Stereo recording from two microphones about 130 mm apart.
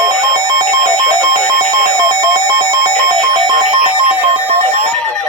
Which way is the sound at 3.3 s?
35° right (ahead or behind).